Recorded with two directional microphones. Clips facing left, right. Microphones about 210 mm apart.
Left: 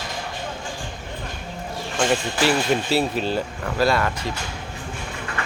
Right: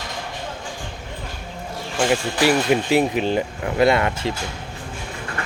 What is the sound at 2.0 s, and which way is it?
Speech, 10° right (ahead or behind).